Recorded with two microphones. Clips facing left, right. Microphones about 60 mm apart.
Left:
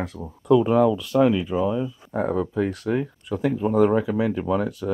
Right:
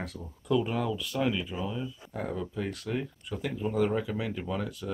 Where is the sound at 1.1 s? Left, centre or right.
Left.